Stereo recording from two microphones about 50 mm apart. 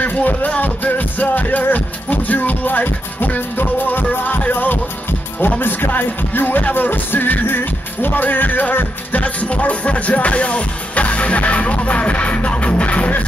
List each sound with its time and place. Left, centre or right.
0.0 s music: left
5.6 s speech: left
5.9 s music: left